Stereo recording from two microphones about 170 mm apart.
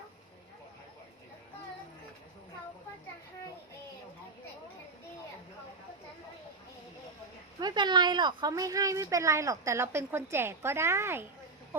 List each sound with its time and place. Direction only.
7.6 s a woman's voice: 25° right (ahead or behind)